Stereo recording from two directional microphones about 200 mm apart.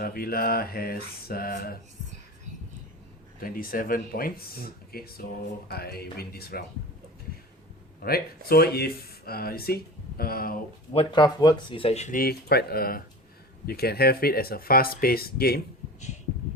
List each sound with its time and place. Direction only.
0.0 s speech: 50° left (ahead or behind)
3.4 s speech: 45° left (ahead or behind)
8.0 s speech: 50° left (ahead or behind)
10.9 s speech: 20° left (ahead or behind); by 15.6 s 50° left (ahead or behind)